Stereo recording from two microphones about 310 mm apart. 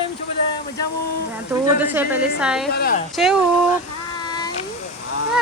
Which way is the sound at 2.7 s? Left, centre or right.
Left.